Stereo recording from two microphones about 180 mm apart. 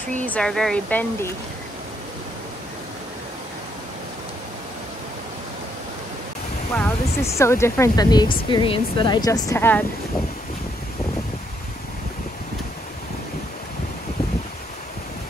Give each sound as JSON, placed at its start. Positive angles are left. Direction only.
{"t": 0.2, "sound": "speech", "side_deg": 5}
{"t": 6.7, "sound": "speech", "side_deg": 10}